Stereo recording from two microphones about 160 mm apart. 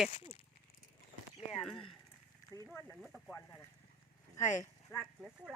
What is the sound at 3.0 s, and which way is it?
Speech, centre (ahead or behind).